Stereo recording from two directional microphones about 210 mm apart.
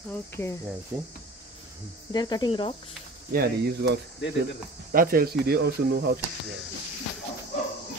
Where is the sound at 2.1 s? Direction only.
20° left (ahead or behind).